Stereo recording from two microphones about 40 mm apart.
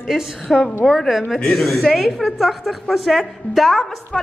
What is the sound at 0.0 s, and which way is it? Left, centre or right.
A woman's voice, centre.